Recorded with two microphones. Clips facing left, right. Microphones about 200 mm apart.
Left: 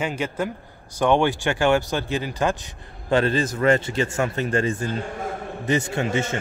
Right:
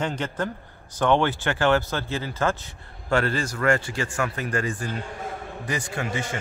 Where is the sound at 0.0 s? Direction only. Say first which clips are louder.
Left 2 dB; 10° left (ahead or behind).